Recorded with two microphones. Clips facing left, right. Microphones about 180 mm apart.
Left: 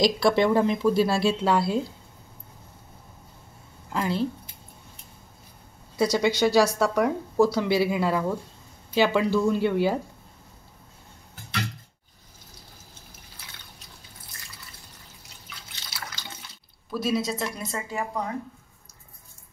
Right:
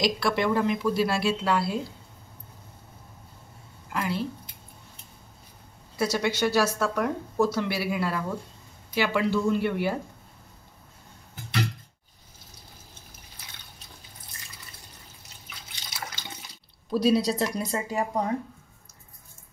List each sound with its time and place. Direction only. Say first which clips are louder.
0.0 s speech: left 5 dB; 30° left (ahead or behind)
3.9 s speech: left 2 dB; 25° left (ahead or behind)
5.9 s speech: left 4 dB; 15° left (ahead or behind)
15.7 s water: right 1 dB; 20° right (ahead or behind)
16.9 s speech: right 4 dB; 35° right (ahead or behind)